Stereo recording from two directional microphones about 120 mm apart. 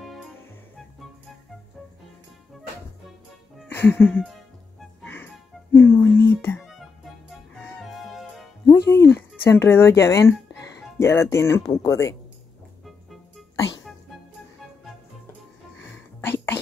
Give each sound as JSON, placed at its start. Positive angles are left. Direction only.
{"t": 3.6, "sound": "music", "side_deg": 15}
{"t": 5.0, "sound": "music", "side_deg": 15}
{"t": 6.6, "sound": "music", "side_deg": 0}
{"t": 8.6, "sound": "music", "side_deg": 25}
{"t": 9.4, "sound": "speech", "side_deg": 20}
{"t": 16.2, "sound": "whispering", "side_deg": 20}